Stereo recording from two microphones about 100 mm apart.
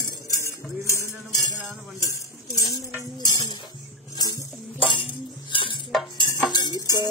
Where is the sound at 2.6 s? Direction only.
35° left (ahead or behind).